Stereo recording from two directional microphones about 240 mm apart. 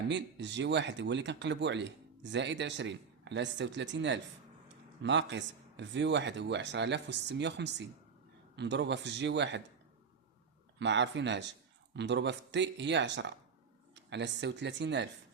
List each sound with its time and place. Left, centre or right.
0.1 s speech: right
10.8 s speech: right